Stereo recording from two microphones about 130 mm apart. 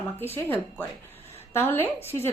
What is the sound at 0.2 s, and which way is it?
Speech, 15° left (ahead or behind).